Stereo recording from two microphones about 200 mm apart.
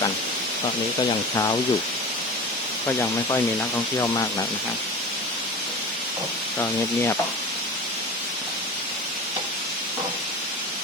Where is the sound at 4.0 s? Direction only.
20° left (ahead or behind).